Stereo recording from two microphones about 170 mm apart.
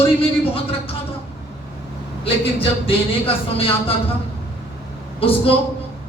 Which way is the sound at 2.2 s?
35° left (ahead or behind).